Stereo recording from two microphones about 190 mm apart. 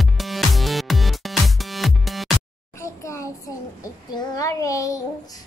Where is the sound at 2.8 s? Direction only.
15° left (ahead or behind).